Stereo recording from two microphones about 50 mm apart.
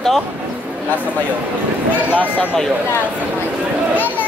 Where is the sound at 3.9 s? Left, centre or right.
Left.